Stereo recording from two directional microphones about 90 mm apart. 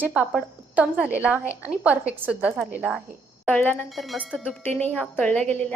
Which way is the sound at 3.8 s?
Centre (ahead or behind).